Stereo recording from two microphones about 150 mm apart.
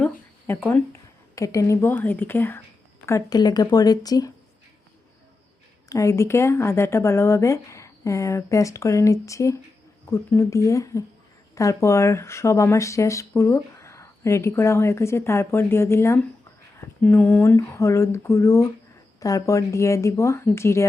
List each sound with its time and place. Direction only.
0.0 s a sound: 15° left (ahead or behind)
1.4 s speech: 20° left (ahead or behind)
5.9 s speech: 20° left (ahead or behind)